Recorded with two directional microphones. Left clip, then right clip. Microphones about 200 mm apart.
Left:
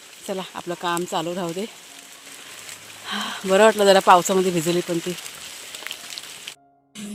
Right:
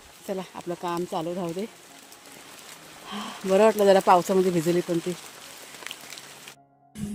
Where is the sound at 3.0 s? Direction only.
5° left (ahead or behind).